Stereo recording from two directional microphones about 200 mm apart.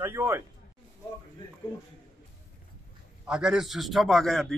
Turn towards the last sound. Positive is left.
turn(degrees=0)  # may be behind; listen again after turning